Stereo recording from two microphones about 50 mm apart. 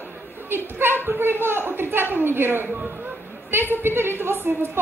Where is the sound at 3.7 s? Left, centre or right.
Right.